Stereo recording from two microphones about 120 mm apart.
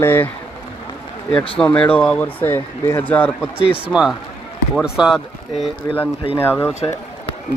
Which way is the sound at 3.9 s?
5° right (ahead or behind).